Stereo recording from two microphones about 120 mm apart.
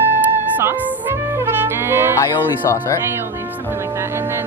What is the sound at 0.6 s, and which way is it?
Music, 20° right (ahead or behind).